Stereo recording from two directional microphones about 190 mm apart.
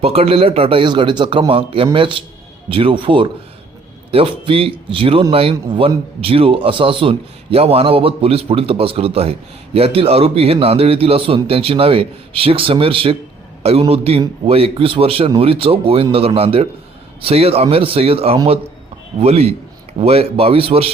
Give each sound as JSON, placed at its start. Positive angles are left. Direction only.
{"t": 0.0, "sound": "a man's voice", "side_deg": -30}